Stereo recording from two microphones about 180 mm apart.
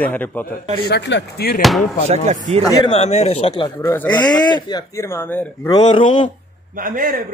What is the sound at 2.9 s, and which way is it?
Speech, 35° left (ahead or behind).